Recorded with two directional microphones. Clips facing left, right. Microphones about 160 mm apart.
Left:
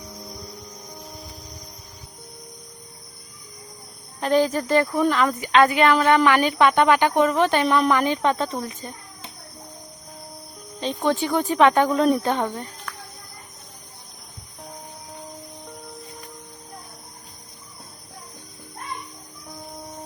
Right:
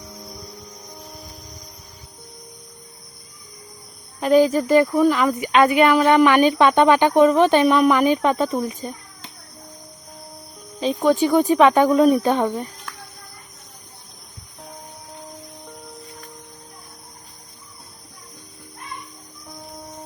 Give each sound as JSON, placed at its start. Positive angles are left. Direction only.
{"t": 4.2, "sound": "speech", "side_deg": -10}
{"t": 5.4, "sound": "speech", "side_deg": -15}
{"t": 10.8, "sound": "speech", "side_deg": -10}